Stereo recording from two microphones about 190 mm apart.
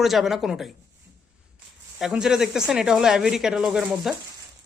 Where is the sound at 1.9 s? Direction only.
Centre (ahead or behind).